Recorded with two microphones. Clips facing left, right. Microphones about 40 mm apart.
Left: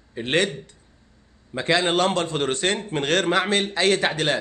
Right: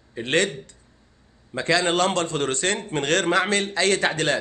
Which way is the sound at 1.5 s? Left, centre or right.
Left.